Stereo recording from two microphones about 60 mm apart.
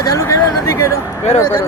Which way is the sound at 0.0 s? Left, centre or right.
Left.